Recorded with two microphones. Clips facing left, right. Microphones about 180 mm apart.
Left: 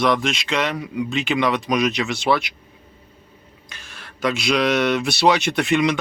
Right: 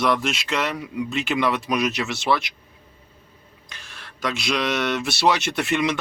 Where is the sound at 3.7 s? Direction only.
Centre (ahead or behind).